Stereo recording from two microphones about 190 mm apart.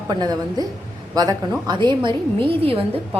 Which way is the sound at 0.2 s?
20° right (ahead or behind).